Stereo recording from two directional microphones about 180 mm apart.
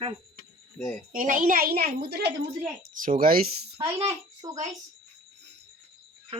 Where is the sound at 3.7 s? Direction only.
15° right (ahead or behind).